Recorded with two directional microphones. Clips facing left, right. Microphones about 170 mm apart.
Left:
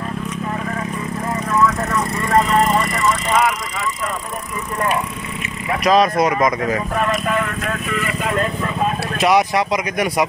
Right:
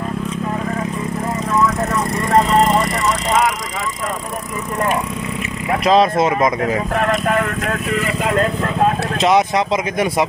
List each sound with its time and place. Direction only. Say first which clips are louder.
5.9 s speech: right 1 dB; 25° right (ahead or behind)
7.1 s speech: right 3 dB; 50° right (ahead or behind)
9.2 s speech: right 1 dB; 20° right (ahead or behind)